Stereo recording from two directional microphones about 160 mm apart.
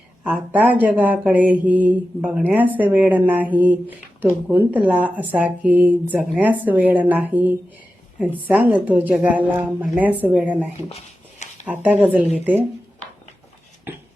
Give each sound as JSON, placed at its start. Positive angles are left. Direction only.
{"t": 0.5, "sound": "speech", "side_deg": -10}
{"t": 10.8, "sound": "a sound", "side_deg": 45}
{"t": 11.6, "sound": "speech", "side_deg": -10}